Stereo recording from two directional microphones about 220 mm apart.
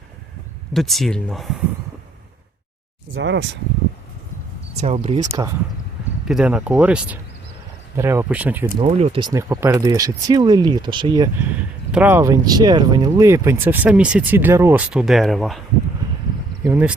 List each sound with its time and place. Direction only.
0.7 s speech: centre (ahead or behind)
3.2 s speech: 55° right (ahead or behind)
4.8 s speech: 25° right (ahead or behind)
6.2 s speech: 5° right (ahead or behind)
8.8 s speech: 30° right (ahead or behind)
11.9 s speech: 5° right (ahead or behind)
16.6 s speech: 10° right (ahead or behind)